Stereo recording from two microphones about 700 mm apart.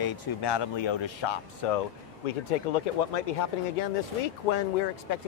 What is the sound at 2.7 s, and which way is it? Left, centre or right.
Speech, left.